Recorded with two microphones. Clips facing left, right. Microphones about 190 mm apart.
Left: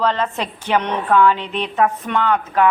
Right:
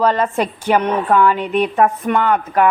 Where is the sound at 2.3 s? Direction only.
45° right (ahead or behind).